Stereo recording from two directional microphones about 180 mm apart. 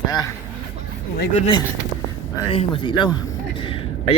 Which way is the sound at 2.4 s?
30° left (ahead or behind).